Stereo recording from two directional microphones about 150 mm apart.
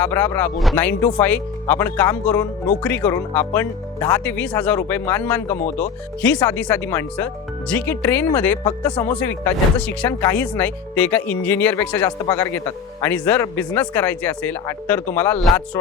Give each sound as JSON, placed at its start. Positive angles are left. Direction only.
{"t": 0.0, "sound": "speech", "side_deg": 15}
{"t": 8.6, "sound": "speech", "side_deg": 20}
{"t": 9.1, "sound": "speech", "side_deg": 10}